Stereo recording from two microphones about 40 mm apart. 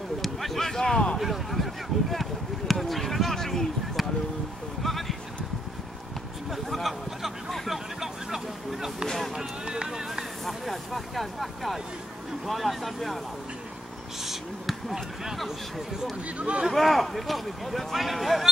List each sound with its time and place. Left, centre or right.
0.2 s speech: centre
1.1 s speech: centre
2.7 s a sound: centre
4.8 s a sound: centre
6.5 s a sound: centre
7.5 s vehicle: centre
9.3 s speech: centre
10.4 s speech: centre
14.2 s speech: centre
16.3 s speech: right
16.7 s speech: centre